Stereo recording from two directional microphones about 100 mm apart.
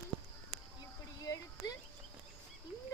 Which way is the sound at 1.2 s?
40° left (ahead or behind).